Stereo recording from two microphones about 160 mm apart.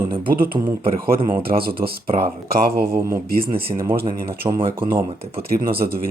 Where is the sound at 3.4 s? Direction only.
35° right (ahead or behind).